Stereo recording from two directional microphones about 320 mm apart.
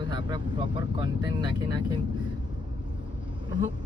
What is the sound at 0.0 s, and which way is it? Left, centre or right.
Speech, centre.